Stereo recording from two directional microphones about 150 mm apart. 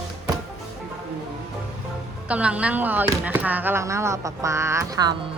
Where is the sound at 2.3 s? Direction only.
10° right (ahead or behind); by 5.1 s 25° right (ahead or behind).